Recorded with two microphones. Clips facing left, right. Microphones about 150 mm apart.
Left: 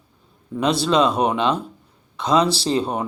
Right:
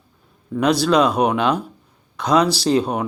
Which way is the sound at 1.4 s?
25° left (ahead or behind).